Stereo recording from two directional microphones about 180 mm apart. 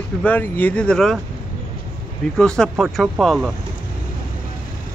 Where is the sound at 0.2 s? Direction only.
10° left (ahead or behind).